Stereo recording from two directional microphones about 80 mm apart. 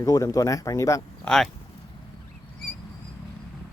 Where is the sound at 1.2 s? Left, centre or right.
Centre.